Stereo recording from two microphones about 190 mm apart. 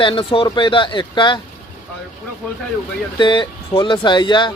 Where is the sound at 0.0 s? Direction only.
25° left (ahead or behind).